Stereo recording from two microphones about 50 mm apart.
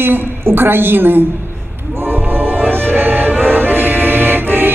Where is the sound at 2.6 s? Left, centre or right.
Right.